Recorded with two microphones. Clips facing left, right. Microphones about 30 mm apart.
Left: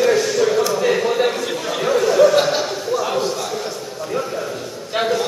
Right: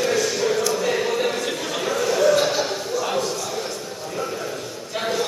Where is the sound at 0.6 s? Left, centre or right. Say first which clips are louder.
Left 4 dB; centre.